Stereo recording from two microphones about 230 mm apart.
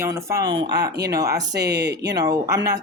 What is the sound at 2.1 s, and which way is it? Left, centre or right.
Speech, centre.